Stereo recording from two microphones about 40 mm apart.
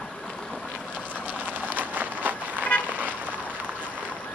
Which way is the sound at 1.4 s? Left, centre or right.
Right.